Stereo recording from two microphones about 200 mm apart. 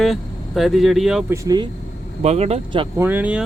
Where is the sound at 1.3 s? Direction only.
15° right (ahead or behind).